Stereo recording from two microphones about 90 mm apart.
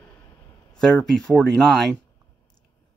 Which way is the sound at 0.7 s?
10° left (ahead or behind).